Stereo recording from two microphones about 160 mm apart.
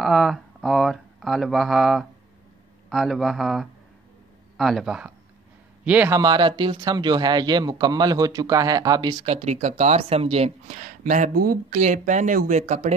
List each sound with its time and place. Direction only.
0.0 s a sound: centre (ahead or behind)
2.9 s a man's voice: centre (ahead or behind)
6.1 s speech: 25° right (ahead or behind)
9.2 s speech: 40° right (ahead or behind)